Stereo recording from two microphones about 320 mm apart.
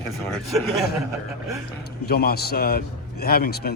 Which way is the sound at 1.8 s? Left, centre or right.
Left.